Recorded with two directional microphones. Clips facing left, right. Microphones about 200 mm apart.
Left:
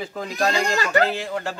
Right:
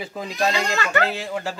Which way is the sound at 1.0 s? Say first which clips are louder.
Left 1 dB; centre (ahead or behind).